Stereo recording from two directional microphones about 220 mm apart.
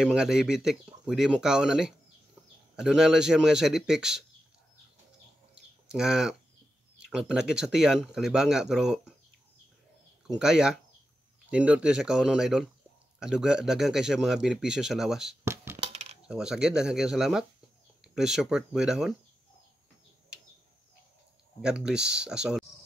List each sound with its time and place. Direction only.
0.0 s speech: 5° right (ahead or behind)
5.5 s bird: 5° right (ahead or behind)
7.0 s speech: 5° right (ahead or behind)
10.2 s speech: 5° right (ahead or behind)
15.4 s coin: 10° right (ahead or behind)
15.7 s coin: 30° right (ahead or behind)
16.3 s speech: 5° right (ahead or behind)
21.5 s speech: 5° right (ahead or behind)